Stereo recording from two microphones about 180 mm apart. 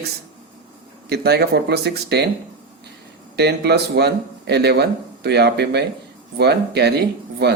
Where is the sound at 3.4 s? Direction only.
65° right (ahead or behind).